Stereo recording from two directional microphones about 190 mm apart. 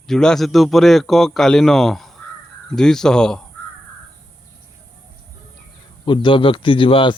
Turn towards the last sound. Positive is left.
turn(degrees=25)  # may be behind; listen again after turning